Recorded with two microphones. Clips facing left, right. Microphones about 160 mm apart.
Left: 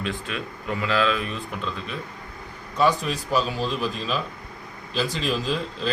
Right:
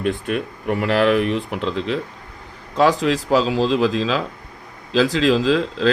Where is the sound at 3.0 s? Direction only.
90° right.